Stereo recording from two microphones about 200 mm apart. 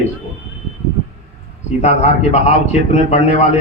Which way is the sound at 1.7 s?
35° left (ahead or behind).